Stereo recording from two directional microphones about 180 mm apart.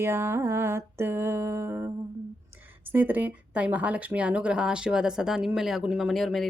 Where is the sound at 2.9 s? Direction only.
10° right (ahead or behind).